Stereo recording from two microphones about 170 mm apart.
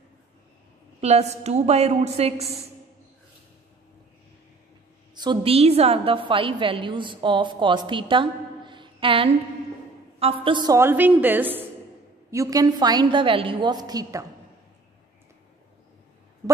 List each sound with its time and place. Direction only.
1.0 s a woman's voice: 40° right (ahead or behind)
5.1 s a woman's voice: 25° right (ahead or behind)
10.8 s a woman's voice: 10° right (ahead or behind)